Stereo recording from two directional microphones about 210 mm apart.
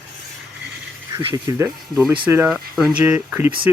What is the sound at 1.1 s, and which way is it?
Speech, 15° right (ahead or behind).